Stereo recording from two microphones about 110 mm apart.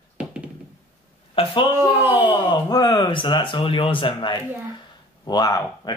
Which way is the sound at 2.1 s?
45° left (ahead or behind).